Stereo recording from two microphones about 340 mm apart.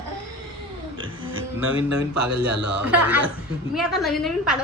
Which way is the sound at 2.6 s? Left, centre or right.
Right.